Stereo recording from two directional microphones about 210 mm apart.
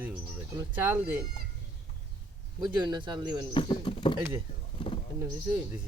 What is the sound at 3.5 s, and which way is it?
Speech, 25° left (ahead or behind).